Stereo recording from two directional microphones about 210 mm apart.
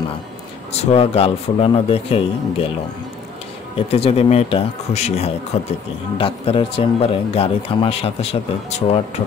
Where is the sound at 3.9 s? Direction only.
30° left (ahead or behind).